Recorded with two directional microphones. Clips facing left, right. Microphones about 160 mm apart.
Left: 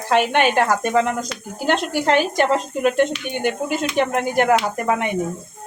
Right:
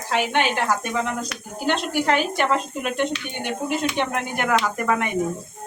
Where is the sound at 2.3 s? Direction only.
45° left (ahead or behind).